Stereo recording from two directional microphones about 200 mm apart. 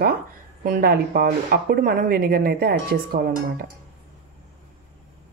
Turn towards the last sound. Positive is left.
turn(degrees=-45)  # may be behind; listen again after turning